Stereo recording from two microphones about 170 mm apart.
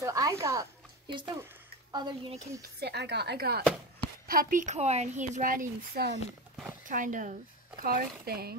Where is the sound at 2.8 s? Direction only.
75° right (ahead or behind).